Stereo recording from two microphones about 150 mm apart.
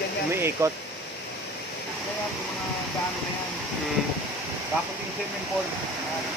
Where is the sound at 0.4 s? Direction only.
15° right (ahead or behind).